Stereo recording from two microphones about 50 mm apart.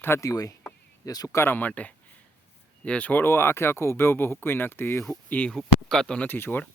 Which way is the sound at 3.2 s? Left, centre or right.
Left.